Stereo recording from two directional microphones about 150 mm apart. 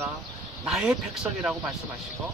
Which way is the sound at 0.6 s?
5° right (ahead or behind).